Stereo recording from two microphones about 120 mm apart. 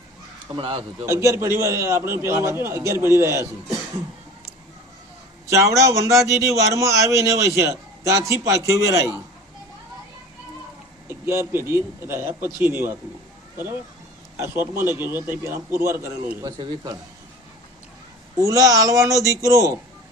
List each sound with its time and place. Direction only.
0.5 s a man's voice: 45° right (ahead or behind)
1.0 s a man's voice: 25° right (ahead or behind)
5.5 s a man's voice: 25° right (ahead or behind)
11.3 s a man's voice: 20° right (ahead or behind)
14.3 s a man's voice: 20° right (ahead or behind)
16.5 s speech: 35° right (ahead or behind)
18.3 s a man's voice: 25° right (ahead or behind)